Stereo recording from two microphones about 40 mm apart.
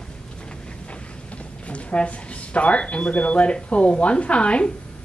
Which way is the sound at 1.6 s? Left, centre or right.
Left.